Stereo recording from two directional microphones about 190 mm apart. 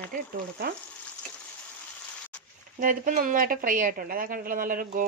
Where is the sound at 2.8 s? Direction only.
45° right (ahead or behind).